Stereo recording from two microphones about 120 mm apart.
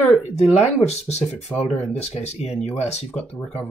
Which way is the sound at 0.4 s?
65° left (ahead or behind).